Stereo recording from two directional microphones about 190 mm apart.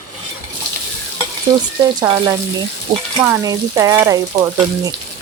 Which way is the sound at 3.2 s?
15° right (ahead or behind).